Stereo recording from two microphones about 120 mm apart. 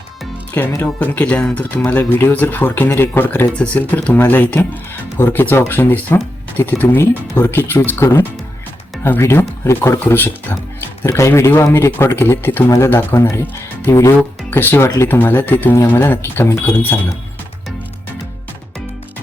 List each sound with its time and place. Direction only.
0.6 s speech: 20° left (ahead or behind)